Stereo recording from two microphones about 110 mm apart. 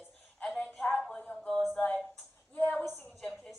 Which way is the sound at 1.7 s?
15° left (ahead or behind).